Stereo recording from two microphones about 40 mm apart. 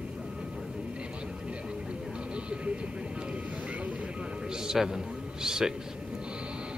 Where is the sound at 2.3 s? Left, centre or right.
Right.